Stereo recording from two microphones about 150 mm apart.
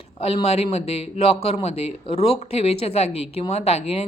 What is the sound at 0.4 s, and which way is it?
A woman's voice, 45° left (ahead or behind).